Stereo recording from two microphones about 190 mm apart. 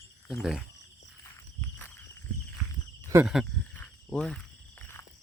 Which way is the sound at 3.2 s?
Centre (ahead or behind).